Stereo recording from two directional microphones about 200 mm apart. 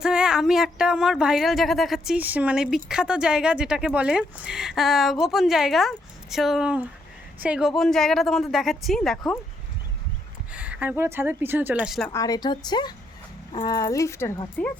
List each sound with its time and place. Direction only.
0.0 s speech: 5° right (ahead or behind)
10.5 s speech: 5° right (ahead or behind)
12.1 s speech: 20° left (ahead or behind)